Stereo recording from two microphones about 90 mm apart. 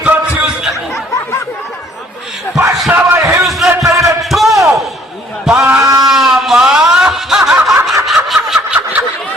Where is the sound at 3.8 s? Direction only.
35° right (ahead or behind).